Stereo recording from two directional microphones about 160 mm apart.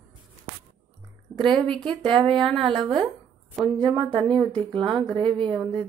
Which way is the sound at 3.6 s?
30° right (ahead or behind).